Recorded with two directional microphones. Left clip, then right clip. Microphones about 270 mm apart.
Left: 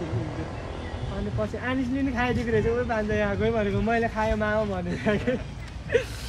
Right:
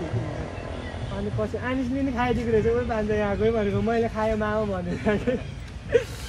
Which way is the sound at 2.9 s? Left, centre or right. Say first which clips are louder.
Right 1 dB; centre.